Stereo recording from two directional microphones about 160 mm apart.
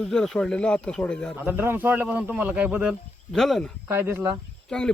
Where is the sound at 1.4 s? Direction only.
15° right (ahead or behind).